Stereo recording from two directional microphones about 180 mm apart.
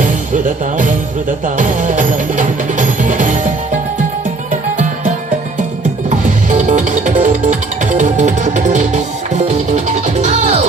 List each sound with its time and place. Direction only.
0.0 s music: 45° right (ahead or behind)
6.1 s music: 40° right (ahead or behind)